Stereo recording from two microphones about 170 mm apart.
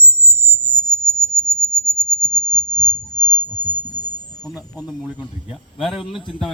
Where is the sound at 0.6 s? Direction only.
25° left (ahead or behind).